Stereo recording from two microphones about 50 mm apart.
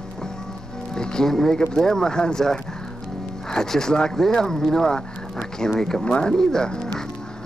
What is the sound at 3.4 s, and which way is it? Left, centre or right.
Speech, centre.